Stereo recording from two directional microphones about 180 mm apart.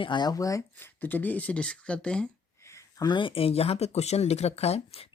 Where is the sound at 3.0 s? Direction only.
25° left (ahead or behind).